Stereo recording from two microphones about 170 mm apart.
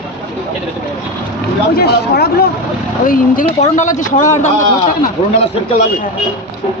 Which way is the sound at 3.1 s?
50° left (ahead or behind).